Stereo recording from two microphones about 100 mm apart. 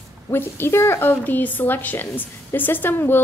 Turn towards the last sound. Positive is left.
turn(degrees=20)  # may be behind; listen again after turning